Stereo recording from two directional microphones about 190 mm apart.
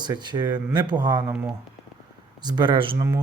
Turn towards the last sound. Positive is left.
turn(degrees=-25)  # may be behind; listen again after turning